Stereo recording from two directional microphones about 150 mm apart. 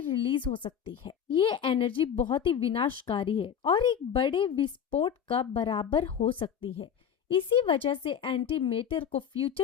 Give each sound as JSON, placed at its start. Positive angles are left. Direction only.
{"t": 0.1, "sound": "a woman's voice", "side_deg": 35}